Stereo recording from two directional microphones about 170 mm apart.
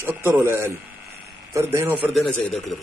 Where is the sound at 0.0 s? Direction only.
15° right (ahead or behind).